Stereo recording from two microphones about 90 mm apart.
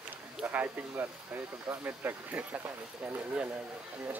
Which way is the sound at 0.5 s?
20° right (ahead or behind).